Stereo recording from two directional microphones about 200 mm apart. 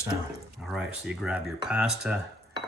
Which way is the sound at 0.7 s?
5° right (ahead or behind).